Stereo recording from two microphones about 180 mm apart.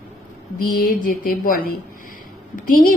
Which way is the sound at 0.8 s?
50° left (ahead or behind).